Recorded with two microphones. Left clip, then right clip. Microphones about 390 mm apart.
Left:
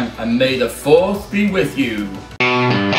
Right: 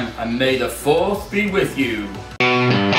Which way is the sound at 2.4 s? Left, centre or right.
Centre.